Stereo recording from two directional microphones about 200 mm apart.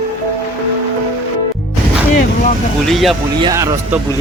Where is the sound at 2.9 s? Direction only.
Centre (ahead or behind).